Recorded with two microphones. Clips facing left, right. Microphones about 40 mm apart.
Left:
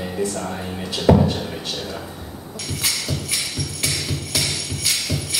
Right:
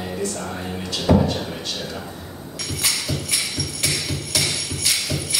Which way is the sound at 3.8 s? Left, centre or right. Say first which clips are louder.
Even; centre.